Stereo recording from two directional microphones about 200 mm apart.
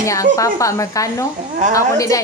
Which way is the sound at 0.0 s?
15° left (ahead or behind).